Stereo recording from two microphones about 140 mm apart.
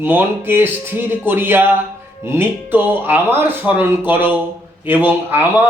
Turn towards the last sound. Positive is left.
turn(degrees=-15)  # may be behind; listen again after turning